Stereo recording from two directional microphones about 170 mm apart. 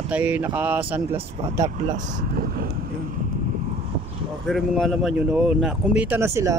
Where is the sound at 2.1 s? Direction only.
60° right (ahead or behind).